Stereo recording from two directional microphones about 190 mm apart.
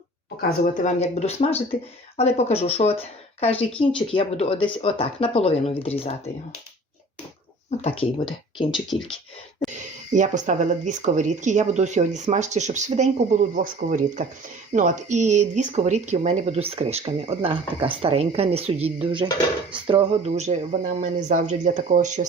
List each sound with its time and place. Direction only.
0.6 s speech: 45° left (ahead or behind)
7.8 s speech: 30° left (ahead or behind)
8.9 s speech: centre (ahead or behind)
10.1 s speech: 40° right (ahead or behind)